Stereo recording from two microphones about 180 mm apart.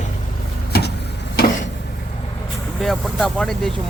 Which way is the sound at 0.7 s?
60° left (ahead or behind).